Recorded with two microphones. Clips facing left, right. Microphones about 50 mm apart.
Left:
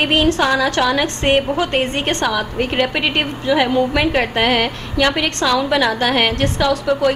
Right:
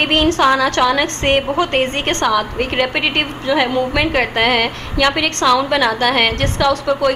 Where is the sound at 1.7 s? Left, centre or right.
Right.